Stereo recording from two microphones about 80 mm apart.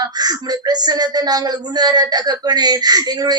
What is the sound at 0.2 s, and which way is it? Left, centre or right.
A woman's voice, right.